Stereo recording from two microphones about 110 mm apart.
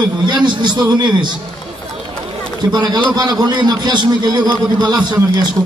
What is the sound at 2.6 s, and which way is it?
A man's voice, 40° right (ahead or behind).